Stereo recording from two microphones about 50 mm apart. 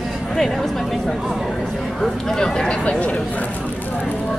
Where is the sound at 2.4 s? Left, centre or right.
Centre.